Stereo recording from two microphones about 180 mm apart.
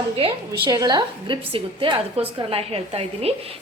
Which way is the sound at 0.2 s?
25° right (ahead or behind).